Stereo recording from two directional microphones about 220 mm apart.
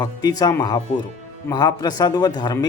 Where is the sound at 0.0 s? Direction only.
15° left (ahead or behind).